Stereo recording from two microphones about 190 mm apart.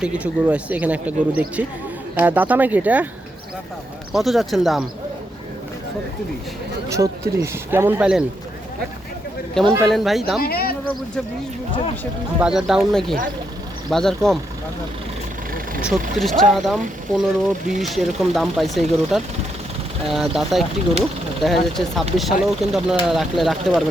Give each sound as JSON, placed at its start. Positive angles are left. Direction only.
{"t": 0.0, "sound": "speech", "side_deg": -5}
{"t": 4.1, "sound": "speech", "side_deg": 0}
{"t": 6.8, "sound": "speech", "side_deg": -15}
{"t": 9.8, "sound": "speech", "side_deg": 0}
{"t": 10.4, "sound": "speech", "side_deg": 55}
{"t": 12.4, "sound": "speech", "side_deg": -5}
{"t": 16.1, "sound": "speech", "side_deg": 0}